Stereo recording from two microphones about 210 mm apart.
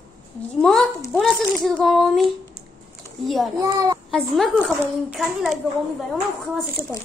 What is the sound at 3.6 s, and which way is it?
Speech, 15° right (ahead or behind).